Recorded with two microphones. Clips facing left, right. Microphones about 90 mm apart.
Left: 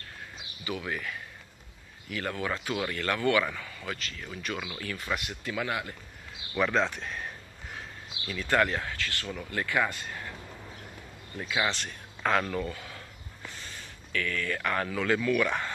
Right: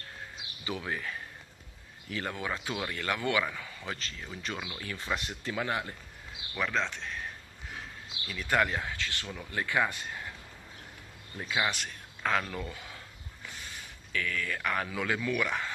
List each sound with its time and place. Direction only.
0.7 s speech: 25° right (ahead or behind)
4.9 s speech: 25° right (ahead or behind)
6.5 s speech: 5° left (ahead or behind)
8.3 s speech: 10° right (ahead or behind)
11.3 s speech: 15° right (ahead or behind)
12.7 s a sound: 20° right (ahead or behind)
13.7 s speech: 15° right (ahead or behind)
15.4 s speech: centre (ahead or behind)